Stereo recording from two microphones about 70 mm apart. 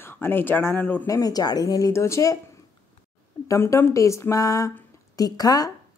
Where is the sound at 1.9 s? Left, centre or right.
Left.